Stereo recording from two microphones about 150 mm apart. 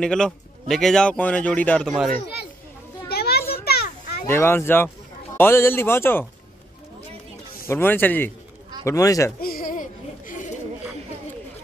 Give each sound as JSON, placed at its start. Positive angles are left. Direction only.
{"t": 0.0, "sound": "speech", "side_deg": 5}
{"t": 3.1, "sound": "children playing", "side_deg": 90}
{"t": 4.3, "sound": "speech", "side_deg": 15}
{"t": 7.6, "sound": "speech", "side_deg": 15}
{"t": 9.4, "sound": "a sound", "side_deg": 75}